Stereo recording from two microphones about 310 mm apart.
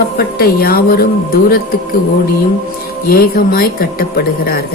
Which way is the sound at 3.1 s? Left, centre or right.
Left.